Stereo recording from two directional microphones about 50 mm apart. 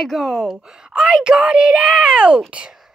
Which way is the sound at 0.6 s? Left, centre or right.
Centre.